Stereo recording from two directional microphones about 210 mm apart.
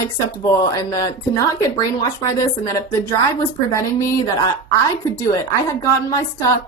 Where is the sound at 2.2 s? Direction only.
15° left (ahead or behind).